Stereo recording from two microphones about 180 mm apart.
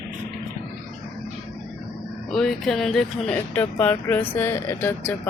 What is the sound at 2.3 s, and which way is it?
Speech, centre (ahead or behind).